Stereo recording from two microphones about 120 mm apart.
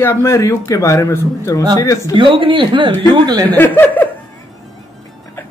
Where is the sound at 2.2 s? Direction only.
45° right (ahead or behind).